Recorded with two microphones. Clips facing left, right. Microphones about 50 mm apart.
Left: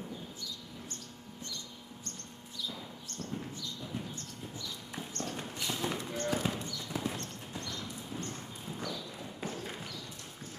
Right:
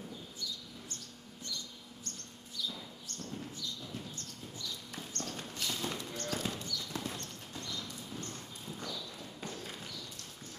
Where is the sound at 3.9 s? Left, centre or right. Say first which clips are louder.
Left 4 dB; left.